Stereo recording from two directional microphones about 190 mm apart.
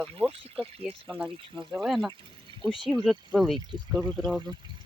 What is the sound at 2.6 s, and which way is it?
Speech, 25° right (ahead or behind).